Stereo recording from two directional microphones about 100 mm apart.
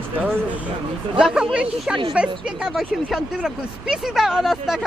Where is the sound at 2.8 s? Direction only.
5° left (ahead or behind).